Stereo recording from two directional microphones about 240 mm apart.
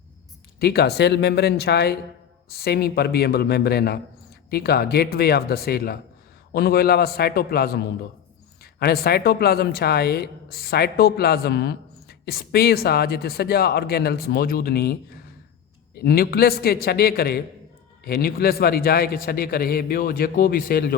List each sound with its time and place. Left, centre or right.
0.6 s speech: left